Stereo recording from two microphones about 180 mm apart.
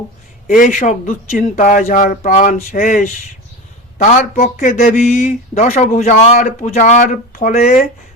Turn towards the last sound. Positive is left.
turn(degrees=45)  # may be behind; listen again after turning